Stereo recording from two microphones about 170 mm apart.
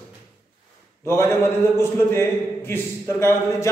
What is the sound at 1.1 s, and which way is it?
A man's voice, 15° left (ahead or behind).